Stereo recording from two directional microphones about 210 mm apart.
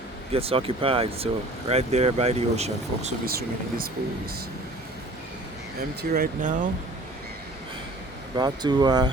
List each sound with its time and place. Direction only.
0.3 s speech: 25° right (ahead or behind)
3.2 s speech: 45° right (ahead or behind)
6.0 s speech: 40° right (ahead or behind)
8.4 s speech: 20° right (ahead or behind)